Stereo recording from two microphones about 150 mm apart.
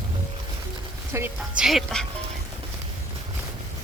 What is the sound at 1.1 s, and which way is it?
Speech, 20° right (ahead or behind).